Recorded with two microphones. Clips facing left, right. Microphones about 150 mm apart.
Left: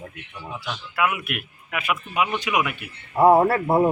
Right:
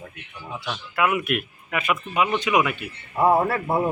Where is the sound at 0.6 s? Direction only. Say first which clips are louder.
Right 1 dB; 5° left (ahead or behind).